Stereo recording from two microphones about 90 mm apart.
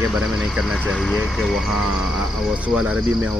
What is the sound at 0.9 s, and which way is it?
Speech, 10° left (ahead or behind).